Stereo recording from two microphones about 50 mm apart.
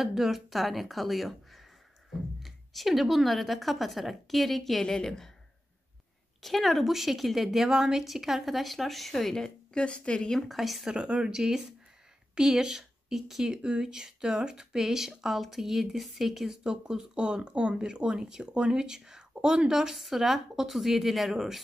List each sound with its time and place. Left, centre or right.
0.0 s a woman's voice: centre
6.4 s a woman's voice: centre
9.8 s speech: centre
10.3 s a woman's voice: centre
10.9 s a woman's voice: centre